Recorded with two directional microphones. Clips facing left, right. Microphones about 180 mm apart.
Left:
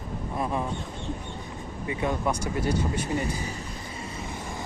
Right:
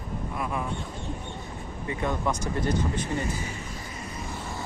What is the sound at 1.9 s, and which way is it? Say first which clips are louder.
Speech: left 1 dB; 10° left (ahead or behind).